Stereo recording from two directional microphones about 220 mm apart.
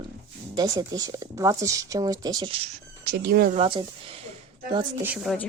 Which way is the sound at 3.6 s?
25° right (ahead or behind).